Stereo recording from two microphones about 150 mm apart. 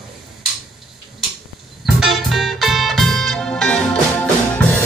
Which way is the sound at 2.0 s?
Centre (ahead or behind).